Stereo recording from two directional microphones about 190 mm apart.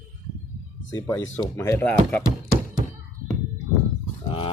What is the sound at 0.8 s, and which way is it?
Speech, 15° left (ahead or behind).